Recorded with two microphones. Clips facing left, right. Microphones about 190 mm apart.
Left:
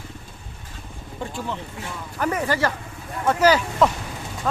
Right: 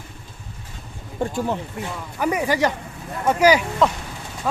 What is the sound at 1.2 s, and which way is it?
Speech, 50° right (ahead or behind).